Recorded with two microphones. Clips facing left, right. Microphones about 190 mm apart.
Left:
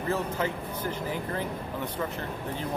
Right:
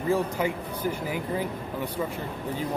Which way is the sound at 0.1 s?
10° right (ahead or behind).